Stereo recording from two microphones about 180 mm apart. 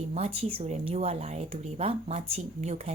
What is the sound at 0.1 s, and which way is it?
A woman's voice, 35° right (ahead or behind).